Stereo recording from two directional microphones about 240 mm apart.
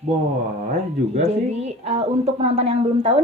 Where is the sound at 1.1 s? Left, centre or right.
Right.